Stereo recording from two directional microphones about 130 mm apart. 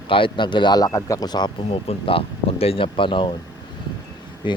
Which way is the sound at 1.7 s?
45° left (ahead or behind).